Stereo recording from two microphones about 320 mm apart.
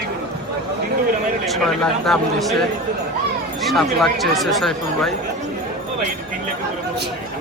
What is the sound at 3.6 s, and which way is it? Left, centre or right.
Speech, centre.